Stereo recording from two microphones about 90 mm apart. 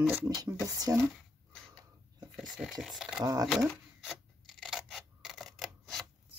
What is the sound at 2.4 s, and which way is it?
Speech, 5° right (ahead or behind).